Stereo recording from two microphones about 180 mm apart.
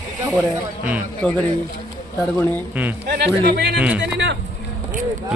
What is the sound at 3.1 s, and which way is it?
Speech, 60° right (ahead or behind).